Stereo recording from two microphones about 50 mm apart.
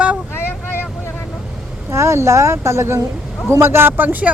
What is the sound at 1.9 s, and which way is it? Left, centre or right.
A man's voice, right.